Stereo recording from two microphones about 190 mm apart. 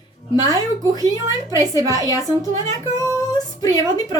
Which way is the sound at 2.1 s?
15° left (ahead or behind).